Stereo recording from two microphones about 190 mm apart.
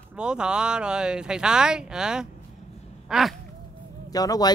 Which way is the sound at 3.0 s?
Centre (ahead or behind).